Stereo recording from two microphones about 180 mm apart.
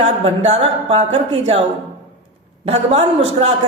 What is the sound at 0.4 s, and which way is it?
A man's voice, 35° right (ahead or behind).